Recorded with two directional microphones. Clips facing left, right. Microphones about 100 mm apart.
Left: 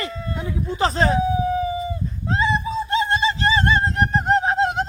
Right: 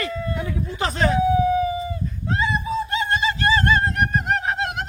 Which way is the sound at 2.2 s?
30° left (ahead or behind).